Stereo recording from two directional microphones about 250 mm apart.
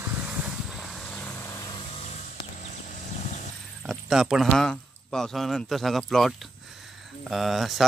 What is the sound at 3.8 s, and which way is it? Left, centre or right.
Speech, centre.